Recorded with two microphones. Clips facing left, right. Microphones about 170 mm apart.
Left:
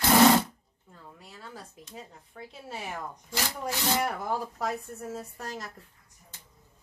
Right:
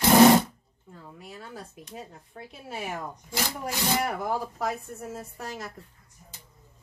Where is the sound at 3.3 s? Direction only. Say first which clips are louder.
Right 1 dB; 15° right (ahead or behind).